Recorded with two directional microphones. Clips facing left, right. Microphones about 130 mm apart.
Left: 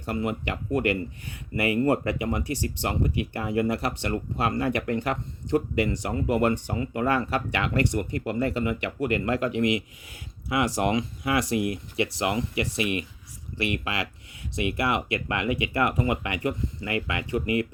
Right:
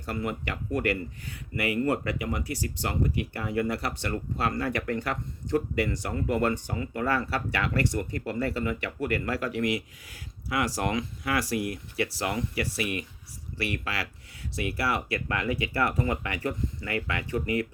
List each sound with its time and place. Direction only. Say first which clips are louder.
0.0 s speech: left 3 dB; 20° left (ahead or behind)